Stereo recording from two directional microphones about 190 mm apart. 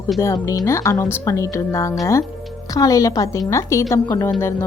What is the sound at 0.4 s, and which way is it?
Speech, 15° left (ahead or behind).